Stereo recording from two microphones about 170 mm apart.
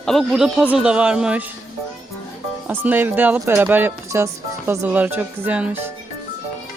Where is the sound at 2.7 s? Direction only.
10° right (ahead or behind).